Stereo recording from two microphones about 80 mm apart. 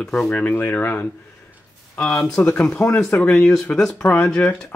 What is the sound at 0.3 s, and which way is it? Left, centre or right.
Speech, left.